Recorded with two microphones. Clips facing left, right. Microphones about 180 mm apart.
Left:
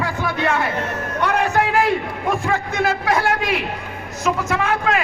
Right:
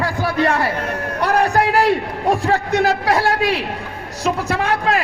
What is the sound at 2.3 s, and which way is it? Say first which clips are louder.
A man's voice: right 5 dB; 35° right (ahead or behind).